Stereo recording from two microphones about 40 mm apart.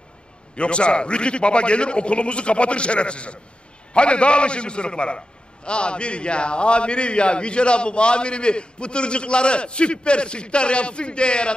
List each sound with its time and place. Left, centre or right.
0.6 s a man's voice: left